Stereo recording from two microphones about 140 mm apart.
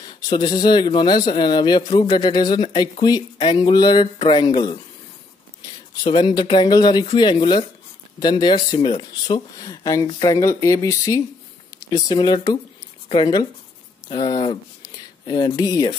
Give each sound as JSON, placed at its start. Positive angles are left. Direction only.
{"t": 0.3, "sound": "a man's voice", "side_deg": 30}
{"t": 6.0, "sound": "a man's voice", "side_deg": 35}